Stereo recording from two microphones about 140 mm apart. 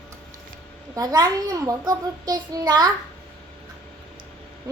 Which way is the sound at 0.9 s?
25° right (ahead or behind).